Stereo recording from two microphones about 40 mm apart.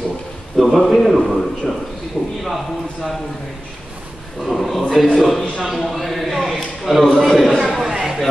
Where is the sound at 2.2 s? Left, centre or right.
Left.